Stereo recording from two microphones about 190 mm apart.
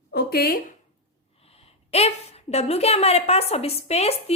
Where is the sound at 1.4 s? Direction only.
30° left (ahead or behind).